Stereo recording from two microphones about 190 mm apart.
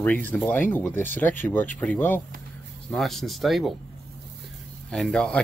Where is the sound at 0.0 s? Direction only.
10° left (ahead or behind).